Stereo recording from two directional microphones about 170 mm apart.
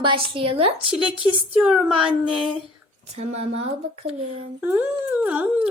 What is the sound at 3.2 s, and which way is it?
Child singing, 40° right (ahead or behind).